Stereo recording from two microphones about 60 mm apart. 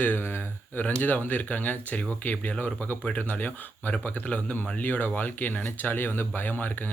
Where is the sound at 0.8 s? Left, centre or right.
Left.